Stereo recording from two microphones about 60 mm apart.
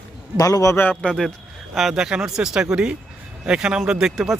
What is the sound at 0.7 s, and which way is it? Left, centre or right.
Speech, left.